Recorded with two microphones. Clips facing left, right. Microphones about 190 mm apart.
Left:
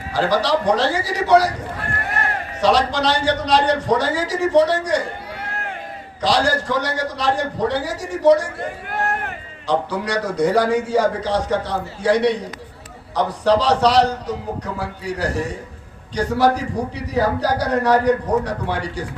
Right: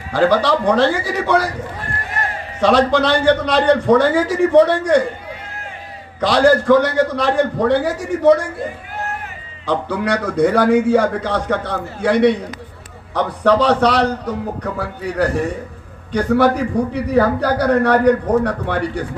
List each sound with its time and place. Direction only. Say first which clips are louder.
0.1 s a man's voice: right 4 dB; 55° right (ahead or behind)
2.6 s a man's voice: right 4 dB; 55° right (ahead or behind)
6.1 s a man's voice: right 6 dB; 55° right (ahead or behind)
8.6 s a sound: left 2 dB; 65° left (ahead or behind)
9.6 s a man's voice: right 2 dB; 55° right (ahead or behind)